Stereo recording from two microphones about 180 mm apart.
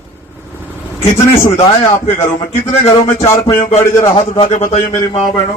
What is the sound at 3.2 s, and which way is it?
A man's voice, 25° left (ahead or behind).